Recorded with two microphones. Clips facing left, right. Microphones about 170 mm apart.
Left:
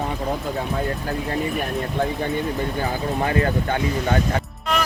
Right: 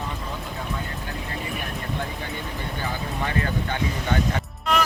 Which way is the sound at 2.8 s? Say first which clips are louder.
Left 4 dB; 40° left (ahead or behind).